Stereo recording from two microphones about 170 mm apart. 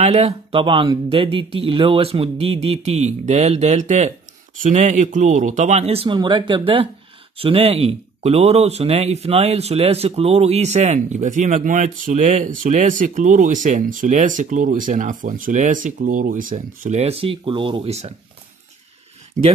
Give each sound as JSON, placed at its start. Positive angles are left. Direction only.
{"t": 0.0, "sound": "speech", "side_deg": -40}
{"t": 19.4, "sound": "speech", "side_deg": -45}